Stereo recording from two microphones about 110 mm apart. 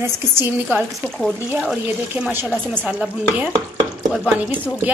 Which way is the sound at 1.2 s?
Centre (ahead or behind).